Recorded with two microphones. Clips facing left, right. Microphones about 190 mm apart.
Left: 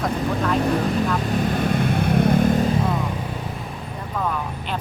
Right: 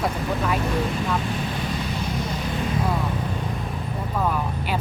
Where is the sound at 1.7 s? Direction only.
55° left (ahead or behind).